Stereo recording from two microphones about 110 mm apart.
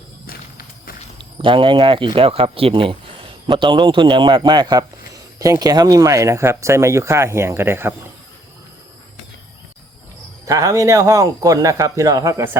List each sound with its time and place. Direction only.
1.2 s speech: 50° right (ahead or behind)
3.4 s a man's voice: 40° right (ahead or behind); by 7.9 s 20° right (ahead or behind)
10.4 s a man's voice: 30° right (ahead or behind)